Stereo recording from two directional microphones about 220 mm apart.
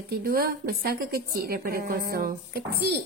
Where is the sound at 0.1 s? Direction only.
45° right (ahead or behind).